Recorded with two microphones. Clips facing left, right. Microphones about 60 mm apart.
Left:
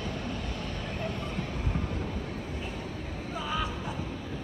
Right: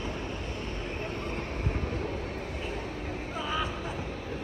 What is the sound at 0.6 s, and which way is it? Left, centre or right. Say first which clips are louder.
Vehicle: even; right.